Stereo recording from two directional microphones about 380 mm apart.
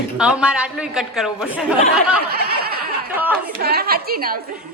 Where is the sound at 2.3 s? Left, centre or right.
Right.